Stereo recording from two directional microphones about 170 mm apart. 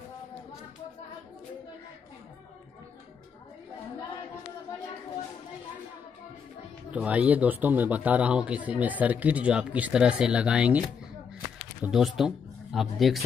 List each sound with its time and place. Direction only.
6.9 s speech: 10° right (ahead or behind)